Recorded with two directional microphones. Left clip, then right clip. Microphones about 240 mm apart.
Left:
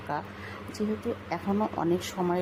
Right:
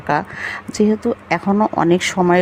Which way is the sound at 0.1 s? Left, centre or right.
Right.